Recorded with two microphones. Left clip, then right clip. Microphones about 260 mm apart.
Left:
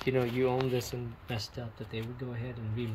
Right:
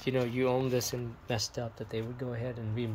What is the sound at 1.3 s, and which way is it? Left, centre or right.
Speech, right.